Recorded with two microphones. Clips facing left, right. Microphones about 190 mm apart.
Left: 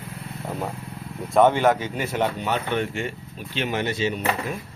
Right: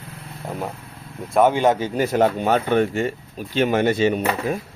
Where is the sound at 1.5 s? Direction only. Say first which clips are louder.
Right 2 dB; 15° right (ahead or behind).